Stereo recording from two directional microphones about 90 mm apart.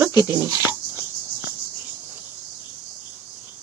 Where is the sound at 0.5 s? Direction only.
25° right (ahead or behind).